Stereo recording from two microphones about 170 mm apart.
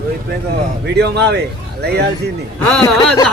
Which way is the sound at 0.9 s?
75° right (ahead or behind).